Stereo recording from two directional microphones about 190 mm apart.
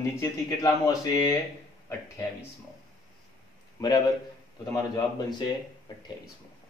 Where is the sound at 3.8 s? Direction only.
20° left (ahead or behind).